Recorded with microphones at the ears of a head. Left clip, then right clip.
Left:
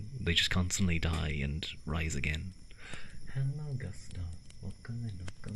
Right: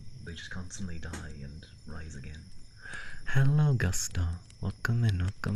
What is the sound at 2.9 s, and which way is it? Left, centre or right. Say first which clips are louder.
Speech: right 15 dB; right.